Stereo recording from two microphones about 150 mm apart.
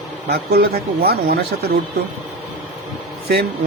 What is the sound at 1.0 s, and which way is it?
Speech, 90° right.